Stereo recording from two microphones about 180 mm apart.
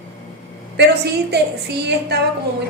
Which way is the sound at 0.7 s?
70° right (ahead or behind).